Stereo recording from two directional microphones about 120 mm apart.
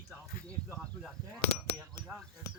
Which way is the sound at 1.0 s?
5° right (ahead or behind).